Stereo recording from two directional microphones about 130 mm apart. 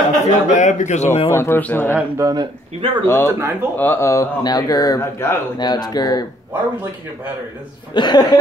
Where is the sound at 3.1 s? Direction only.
15° left (ahead or behind).